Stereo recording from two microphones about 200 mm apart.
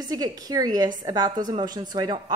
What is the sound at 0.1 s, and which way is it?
A woman's voice, 20° right (ahead or behind).